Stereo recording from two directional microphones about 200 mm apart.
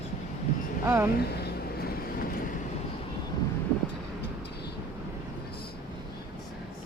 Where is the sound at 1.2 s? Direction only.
50° left (ahead or behind).